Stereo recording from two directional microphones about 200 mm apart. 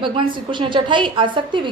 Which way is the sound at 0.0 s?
25° right (ahead or behind).